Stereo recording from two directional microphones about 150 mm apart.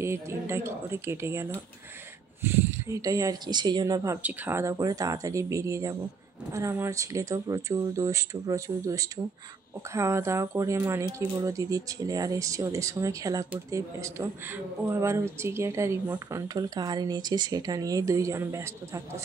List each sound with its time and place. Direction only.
0.0 s speech: 15° right (ahead or behind)
4.2 s speech: 15° right (ahead or behind)